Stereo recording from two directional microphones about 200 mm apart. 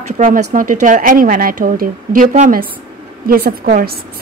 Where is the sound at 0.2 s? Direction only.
40° right (ahead or behind).